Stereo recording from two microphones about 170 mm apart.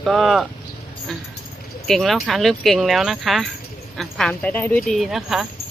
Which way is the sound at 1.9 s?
Centre (ahead or behind).